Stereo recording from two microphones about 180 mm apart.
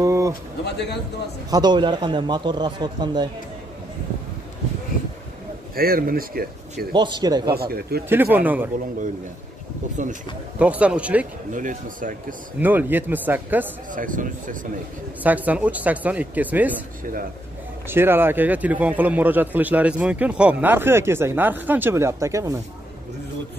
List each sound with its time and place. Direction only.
0.0 s a sound: 15° right (ahead or behind)
0.7 s a man's voice: 70° left (ahead or behind)
1.5 s speech: 25° right (ahead or behind)
5.8 s speech: 55° right (ahead or behind)
6.9 s speech: 25° right (ahead or behind)
7.5 s speech: 60° right (ahead or behind)
8.1 s speech: 10° right (ahead or behind)
10.6 s speech: 5° right (ahead or behind)
11.5 s speech: 45° right (ahead or behind)
12.5 s speech: 10° right (ahead or behind)
13.9 s speech: 45° right (ahead or behind)
15.2 s speech: 10° right (ahead or behind)
17.8 s speech: 10° right (ahead or behind)